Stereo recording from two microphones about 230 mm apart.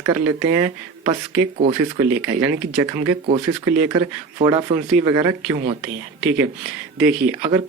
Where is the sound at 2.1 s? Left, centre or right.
Centre.